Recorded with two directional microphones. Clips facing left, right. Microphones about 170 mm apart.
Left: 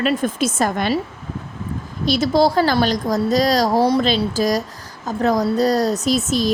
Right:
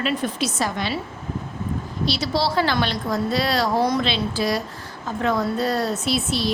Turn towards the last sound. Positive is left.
turn(degrees=45)  # may be behind; listen again after turning